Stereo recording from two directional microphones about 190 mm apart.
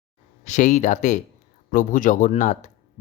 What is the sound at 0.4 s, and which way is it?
Speech, 40° left (ahead or behind).